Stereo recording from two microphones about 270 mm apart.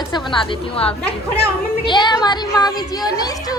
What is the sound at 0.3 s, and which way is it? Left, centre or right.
A woman's voice, centre.